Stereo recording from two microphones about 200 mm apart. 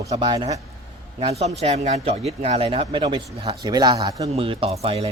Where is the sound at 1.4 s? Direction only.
35° right (ahead or behind).